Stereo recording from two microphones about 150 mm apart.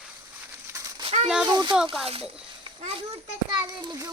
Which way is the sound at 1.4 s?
30° right (ahead or behind).